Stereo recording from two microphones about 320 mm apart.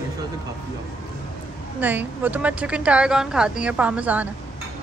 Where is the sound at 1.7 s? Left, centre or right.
Centre.